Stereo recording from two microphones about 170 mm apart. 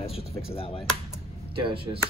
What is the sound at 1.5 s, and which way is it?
Speech, 30° right (ahead or behind).